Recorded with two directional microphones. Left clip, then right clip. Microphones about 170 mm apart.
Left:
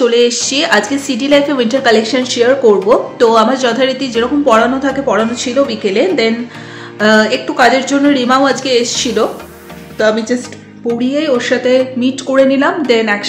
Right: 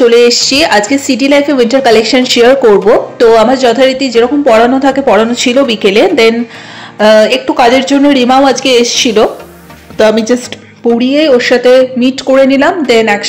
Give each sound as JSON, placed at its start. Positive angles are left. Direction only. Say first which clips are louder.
{"t": 0.0, "sound": "a woman's voice", "louder": "right 6 dB", "side_deg": -30}
{"t": 3.2, "sound": "a woman's voice", "louder": "right 6 dB", "side_deg": -25}